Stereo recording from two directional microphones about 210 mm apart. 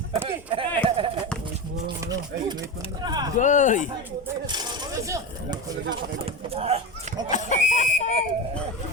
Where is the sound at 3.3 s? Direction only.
35° left (ahead or behind).